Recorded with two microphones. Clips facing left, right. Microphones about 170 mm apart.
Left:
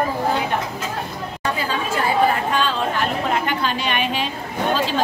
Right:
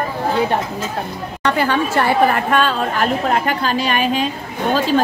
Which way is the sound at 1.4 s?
70° right (ahead or behind).